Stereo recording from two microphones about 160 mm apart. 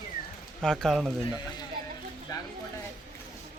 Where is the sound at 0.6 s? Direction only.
5° left (ahead or behind).